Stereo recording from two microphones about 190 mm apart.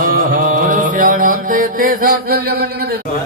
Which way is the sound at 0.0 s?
50° right (ahead or behind).